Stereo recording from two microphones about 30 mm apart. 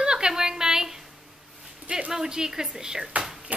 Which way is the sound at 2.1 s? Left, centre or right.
Right.